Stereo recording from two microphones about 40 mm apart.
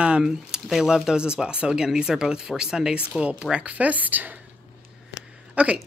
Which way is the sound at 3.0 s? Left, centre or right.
Right.